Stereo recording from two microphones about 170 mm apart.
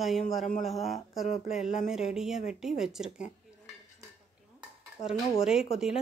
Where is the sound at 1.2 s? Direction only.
40° left (ahead or behind).